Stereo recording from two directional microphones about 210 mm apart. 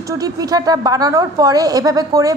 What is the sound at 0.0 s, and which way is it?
A woman's voice, 15° right (ahead or behind).